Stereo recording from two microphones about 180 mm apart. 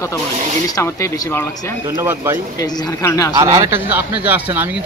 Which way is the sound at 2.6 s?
15° left (ahead or behind).